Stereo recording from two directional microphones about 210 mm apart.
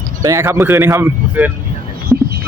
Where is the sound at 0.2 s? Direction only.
15° right (ahead or behind).